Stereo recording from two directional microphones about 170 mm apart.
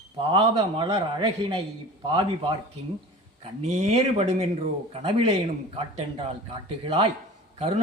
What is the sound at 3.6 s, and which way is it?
Speech, 40° right (ahead or behind).